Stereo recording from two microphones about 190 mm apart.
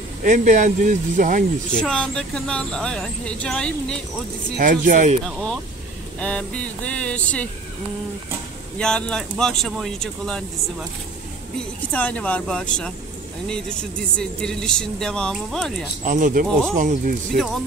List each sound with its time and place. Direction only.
0.2 s speech: 40° right (ahead or behind)
1.8 s speech: 5° left (ahead or behind)
4.6 s speech: 45° right (ahead or behind)
5.2 s speech: 5° left (ahead or behind)
6.1 s a sound: 5° left (ahead or behind)
8.7 s speech: 5° left (ahead or behind)
11.9 s speech: 5° left (ahead or behind)
16.1 s speech: 45° right (ahead or behind)